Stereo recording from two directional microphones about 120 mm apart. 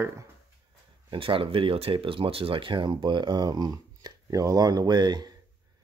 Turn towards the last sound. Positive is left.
turn(degrees=-35)  # may be behind; listen again after turning